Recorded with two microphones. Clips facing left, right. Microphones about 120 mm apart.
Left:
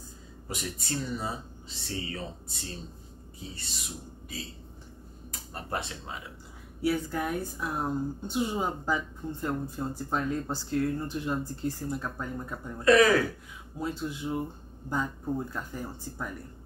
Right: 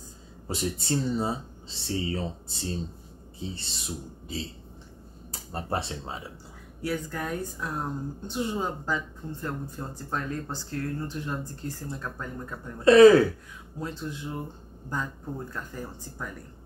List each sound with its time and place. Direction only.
0.5 s speech: 30° right (ahead or behind)
6.8 s speech: 10° left (ahead or behind)
12.8 s speech: 30° right (ahead or behind)
13.7 s speech: 10° left (ahead or behind)